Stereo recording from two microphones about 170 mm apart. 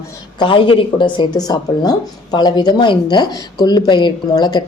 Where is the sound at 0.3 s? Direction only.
25° left (ahead or behind).